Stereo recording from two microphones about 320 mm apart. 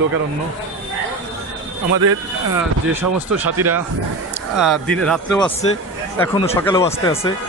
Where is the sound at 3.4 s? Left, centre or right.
Right.